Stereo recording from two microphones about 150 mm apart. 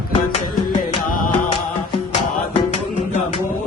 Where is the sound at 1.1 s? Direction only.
75° left (ahead or behind).